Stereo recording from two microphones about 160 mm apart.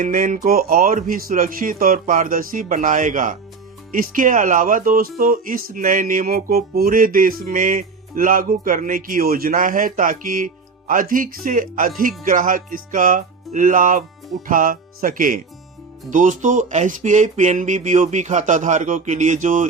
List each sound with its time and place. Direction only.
0.0 s speech: 60° right (ahead or behind)